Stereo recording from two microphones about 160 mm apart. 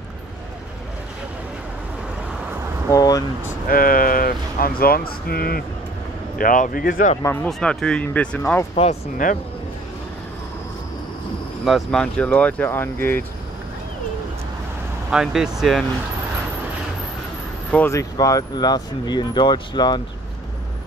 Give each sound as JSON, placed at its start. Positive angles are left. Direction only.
{"t": 2.9, "sound": "speech", "side_deg": 20}
{"t": 3.6, "sound": "speech", "side_deg": 65}
{"t": 6.3, "sound": "speech", "side_deg": 60}
{"t": 7.4, "sound": "speech", "side_deg": 5}
{"t": 11.6, "sound": "speech", "side_deg": 0}
{"t": 15.0, "sound": "speech", "side_deg": -5}
{"t": 17.6, "sound": "speech", "side_deg": 10}
{"t": 18.1, "sound": "speech", "side_deg": 25}